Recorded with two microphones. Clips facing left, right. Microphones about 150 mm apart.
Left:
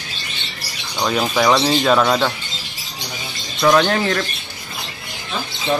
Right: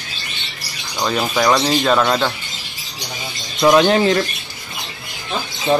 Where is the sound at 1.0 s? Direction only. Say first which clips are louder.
Even; centre (ahead or behind).